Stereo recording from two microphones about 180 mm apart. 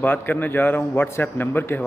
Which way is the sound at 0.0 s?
10° left (ahead or behind).